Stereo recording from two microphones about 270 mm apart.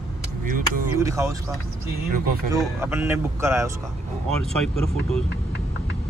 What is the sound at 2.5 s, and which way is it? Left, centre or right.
Speech, centre.